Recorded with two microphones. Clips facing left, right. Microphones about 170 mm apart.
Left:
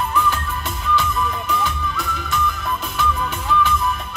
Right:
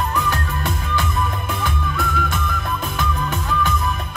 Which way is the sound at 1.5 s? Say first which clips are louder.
Left 1 dB; 50° right (ahead or behind).